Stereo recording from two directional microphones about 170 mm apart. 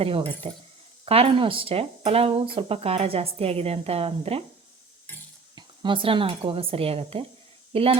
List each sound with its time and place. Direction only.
0.0 s speech: 35° right (ahead or behind)
5.5 s speech: 30° right (ahead or behind)